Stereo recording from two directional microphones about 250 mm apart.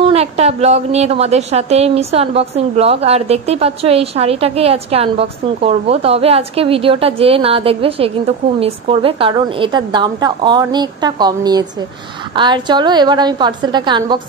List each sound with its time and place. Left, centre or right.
0.0 s a woman's voice: right